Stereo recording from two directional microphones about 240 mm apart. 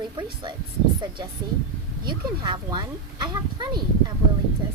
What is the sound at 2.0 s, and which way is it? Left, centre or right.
Speech, centre.